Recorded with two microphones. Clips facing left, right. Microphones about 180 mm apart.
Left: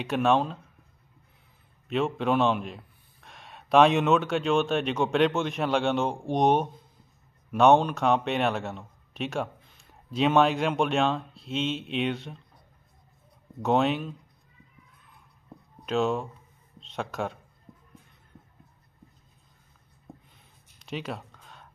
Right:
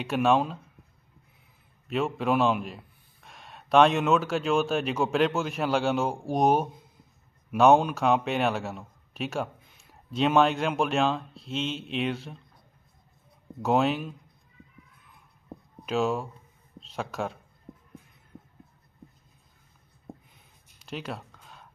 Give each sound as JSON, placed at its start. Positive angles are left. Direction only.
{"t": 0.0, "sound": "a man's voice", "side_deg": 0}
{"t": 1.9, "sound": "a man's voice", "side_deg": 0}
{"t": 13.6, "sound": "a man's voice", "side_deg": 0}
{"t": 15.8, "sound": "a man's voice", "side_deg": -5}
{"t": 20.8, "sound": "a sound", "side_deg": 0}